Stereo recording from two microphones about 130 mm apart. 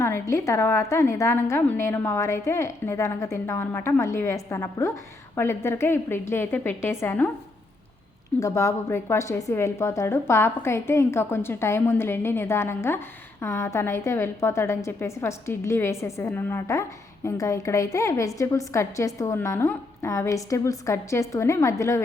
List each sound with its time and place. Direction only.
0.0 s a woman's voice: 20° left (ahead or behind)
8.4 s a woman's voice: 25° left (ahead or behind)